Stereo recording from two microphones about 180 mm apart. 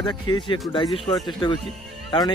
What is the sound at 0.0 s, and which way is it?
Speech, 25° left (ahead or behind).